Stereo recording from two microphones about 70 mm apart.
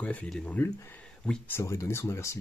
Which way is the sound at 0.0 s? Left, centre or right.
Centre.